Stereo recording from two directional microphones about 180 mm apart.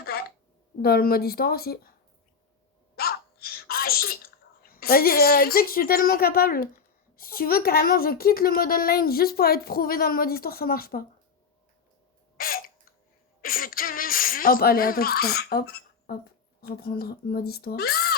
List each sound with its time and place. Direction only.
0.0 s a sound: 60° left (ahead or behind)
0.8 s a woman's voice: 60° left (ahead or behind)
2.9 s sneeze: 60° left (ahead or behind)
7.2 s a woman's voice: 55° left (ahead or behind)
12.4 s hiccup: 55° left (ahead or behind)
13.4 s a woman's voice: 50° left (ahead or behind)